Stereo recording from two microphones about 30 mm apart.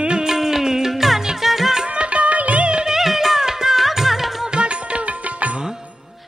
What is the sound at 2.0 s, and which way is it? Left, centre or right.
Music, right.